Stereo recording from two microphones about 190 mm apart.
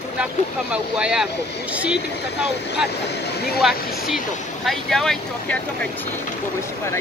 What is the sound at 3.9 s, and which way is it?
Speech, centre (ahead or behind).